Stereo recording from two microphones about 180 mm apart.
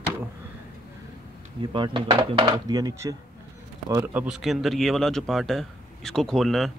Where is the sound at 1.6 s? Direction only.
25° right (ahead or behind).